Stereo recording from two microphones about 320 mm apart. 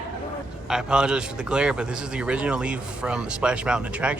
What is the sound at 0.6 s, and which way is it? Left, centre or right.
A man's voice, centre.